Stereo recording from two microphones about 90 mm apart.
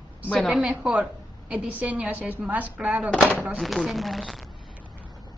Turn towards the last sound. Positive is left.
turn(degrees=0)  # may be behind; listen again after turning